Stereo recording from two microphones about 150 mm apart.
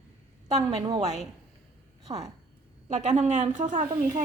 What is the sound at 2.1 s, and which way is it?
Speech, 30° right (ahead or behind).